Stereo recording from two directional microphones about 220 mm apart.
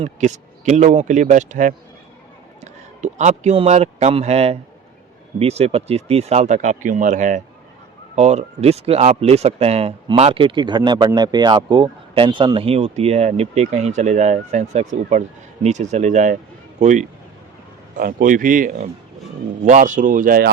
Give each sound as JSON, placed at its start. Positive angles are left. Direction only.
{"t": 0.0, "sound": "a man's voice", "side_deg": -30}